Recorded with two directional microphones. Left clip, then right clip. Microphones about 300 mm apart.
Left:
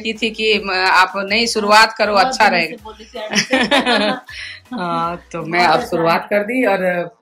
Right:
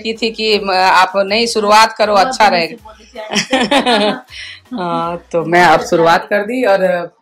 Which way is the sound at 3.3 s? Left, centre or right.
Centre.